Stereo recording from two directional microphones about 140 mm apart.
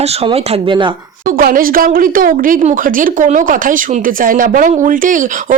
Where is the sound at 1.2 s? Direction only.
90° right.